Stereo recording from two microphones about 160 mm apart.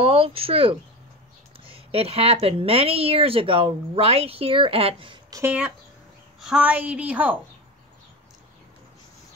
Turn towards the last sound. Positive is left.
turn(degrees=-10)  # may be behind; listen again after turning